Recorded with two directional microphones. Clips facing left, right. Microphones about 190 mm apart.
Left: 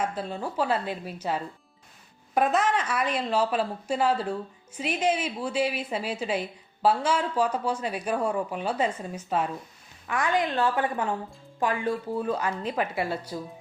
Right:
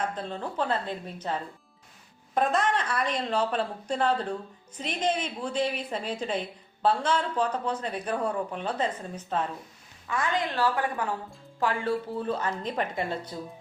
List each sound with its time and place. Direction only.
0.0 s a woman's voice: 10° left (ahead or behind)